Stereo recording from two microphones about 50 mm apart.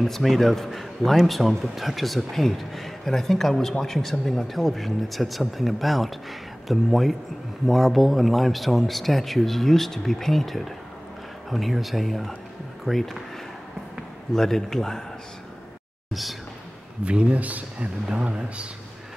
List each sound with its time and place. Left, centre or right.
0.0 s a man's voice: centre
14.3 s speech: centre
16.1 s speech: centre
17.0 s speech: right
18.0 s speech: centre